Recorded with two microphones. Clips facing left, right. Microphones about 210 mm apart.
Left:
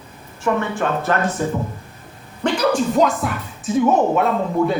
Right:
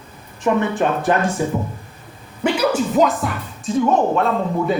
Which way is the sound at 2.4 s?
5° right (ahead or behind).